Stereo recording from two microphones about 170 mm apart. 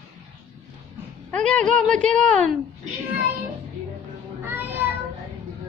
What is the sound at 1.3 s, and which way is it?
A woman's voice, 5° left (ahead or behind).